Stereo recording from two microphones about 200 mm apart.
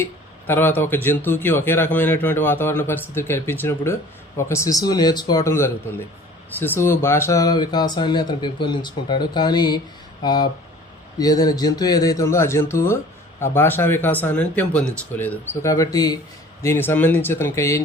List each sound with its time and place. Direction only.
0.0 s speech: 10° left (ahead or behind)